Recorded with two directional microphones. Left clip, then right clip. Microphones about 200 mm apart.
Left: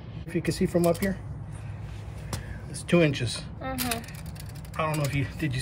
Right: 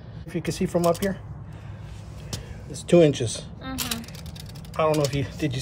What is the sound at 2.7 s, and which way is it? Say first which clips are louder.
Speech: right 6 dB; 15° right (ahead or behind).